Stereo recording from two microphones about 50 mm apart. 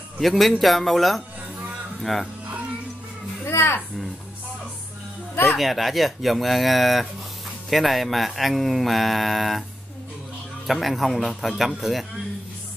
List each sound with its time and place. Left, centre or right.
0.2 s speech: centre
3.4 s speech: left
5.3 s speech: left
5.6 s speech: centre
10.7 s speech: centre